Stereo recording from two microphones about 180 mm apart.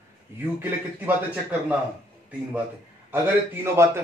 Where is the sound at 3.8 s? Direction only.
15° right (ahead or behind).